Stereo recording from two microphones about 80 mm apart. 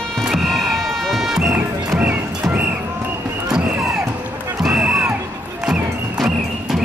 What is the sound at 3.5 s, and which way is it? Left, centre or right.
Music, centre.